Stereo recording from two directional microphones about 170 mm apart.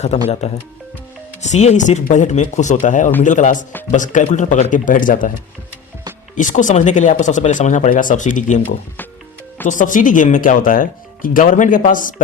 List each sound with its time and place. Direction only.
0.4 s speech: 40° left (ahead or behind)
6.3 s speech: 50° left (ahead or behind)